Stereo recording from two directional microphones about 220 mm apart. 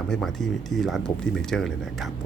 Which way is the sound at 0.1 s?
Centre (ahead or behind).